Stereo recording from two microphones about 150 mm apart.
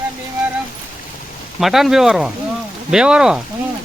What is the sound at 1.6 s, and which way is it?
Speech, centre (ahead or behind).